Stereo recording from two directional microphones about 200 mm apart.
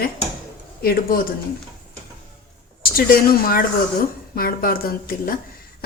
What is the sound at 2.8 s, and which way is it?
A woman's voice, 50° left (ahead or behind).